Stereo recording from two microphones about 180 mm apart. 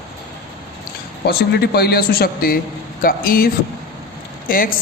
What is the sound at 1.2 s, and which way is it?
A man's voice, 60° left (ahead or behind).